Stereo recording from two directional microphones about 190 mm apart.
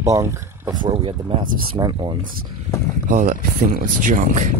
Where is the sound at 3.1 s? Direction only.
45° right (ahead or behind).